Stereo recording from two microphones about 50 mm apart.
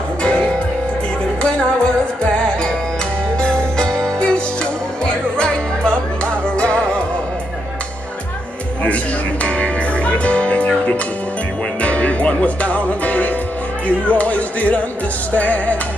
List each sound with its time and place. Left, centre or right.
0.2 s music: centre
3.3 s music: centre
8.8 s music: left
11.8 s music: left
13.8 s speech: left